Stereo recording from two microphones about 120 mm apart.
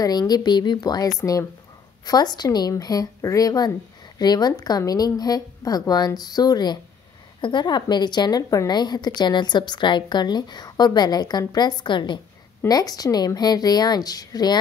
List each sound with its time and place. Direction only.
0.0 s a woman's voice: 35° left (ahead or behind)